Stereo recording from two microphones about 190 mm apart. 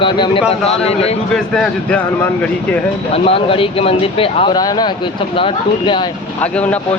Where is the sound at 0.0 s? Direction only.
25° left (ahead or behind).